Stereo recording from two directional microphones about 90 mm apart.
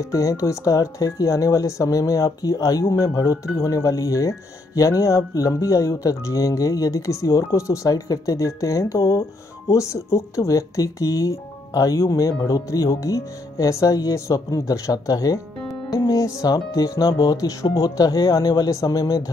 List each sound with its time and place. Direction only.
0.0 s speech: 35° left (ahead or behind)